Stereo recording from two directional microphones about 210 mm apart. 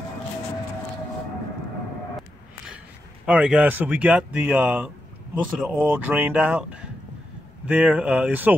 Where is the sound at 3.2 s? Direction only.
5° right (ahead or behind).